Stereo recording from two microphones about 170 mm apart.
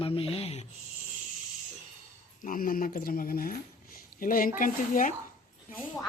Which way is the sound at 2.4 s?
55° left (ahead or behind).